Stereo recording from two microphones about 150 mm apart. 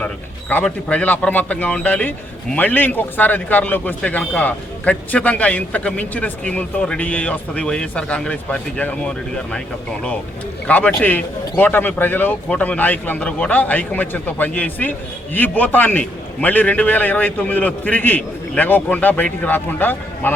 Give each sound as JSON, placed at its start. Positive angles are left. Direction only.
{"t": 0.0, "sound": "a man's voice", "side_deg": 10}
{"t": 10.7, "sound": "a man's voice", "side_deg": 10}